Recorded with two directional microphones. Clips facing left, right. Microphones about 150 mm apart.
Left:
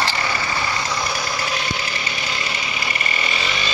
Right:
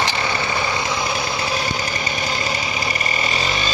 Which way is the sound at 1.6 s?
40° right (ahead or behind).